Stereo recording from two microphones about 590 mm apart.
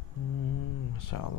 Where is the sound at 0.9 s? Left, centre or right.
Left.